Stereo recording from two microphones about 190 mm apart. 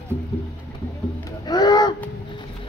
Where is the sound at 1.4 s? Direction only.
20° left (ahead or behind).